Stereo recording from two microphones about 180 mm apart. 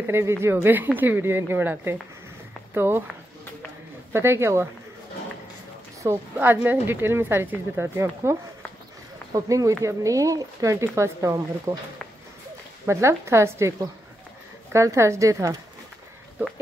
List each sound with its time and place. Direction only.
0.0 s speech: 15° right (ahead or behind)
4.1 s speech: 15° right (ahead or behind)
6.0 s speech: 10° right (ahead or behind)
12.8 s speech: 15° right (ahead or behind)